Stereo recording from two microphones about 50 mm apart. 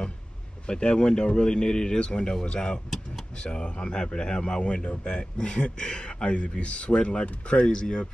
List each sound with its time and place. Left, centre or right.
0.7 s speech: centre